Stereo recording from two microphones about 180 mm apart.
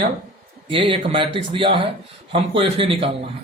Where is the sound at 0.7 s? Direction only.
25° right (ahead or behind).